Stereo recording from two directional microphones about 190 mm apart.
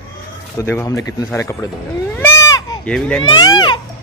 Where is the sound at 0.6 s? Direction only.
15° left (ahead or behind).